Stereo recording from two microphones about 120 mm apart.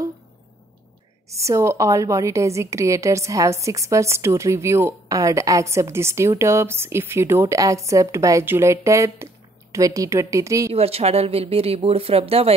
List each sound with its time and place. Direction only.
1.3 s a woman's voice: 25° right (ahead or behind)
10.7 s speech: 55° right (ahead or behind)